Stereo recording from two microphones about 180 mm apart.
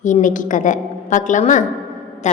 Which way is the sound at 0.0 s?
45° left (ahead or behind).